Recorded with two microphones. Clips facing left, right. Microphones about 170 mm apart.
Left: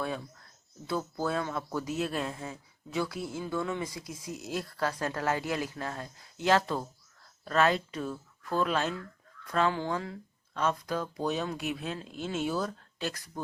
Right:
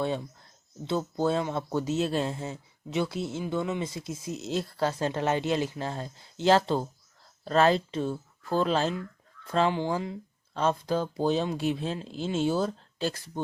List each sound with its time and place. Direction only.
0.9 s speech: 25° right (ahead or behind)
10.5 s speech: 30° right (ahead or behind)